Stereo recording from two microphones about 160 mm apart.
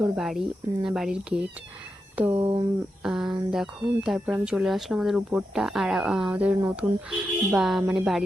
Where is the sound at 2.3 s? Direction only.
35° right (ahead or behind).